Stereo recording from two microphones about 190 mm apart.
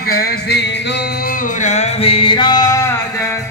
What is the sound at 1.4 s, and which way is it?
Music, 40° left (ahead or behind).